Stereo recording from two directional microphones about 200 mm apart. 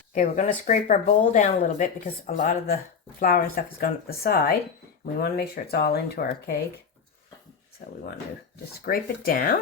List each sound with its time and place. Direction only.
0.1 s speech: 35° left (ahead or behind)
3.2 s speech: 45° left (ahead or behind)
7.8 s speech: 45° left (ahead or behind)